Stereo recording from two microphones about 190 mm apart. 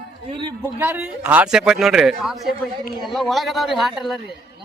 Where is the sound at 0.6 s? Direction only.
10° right (ahead or behind).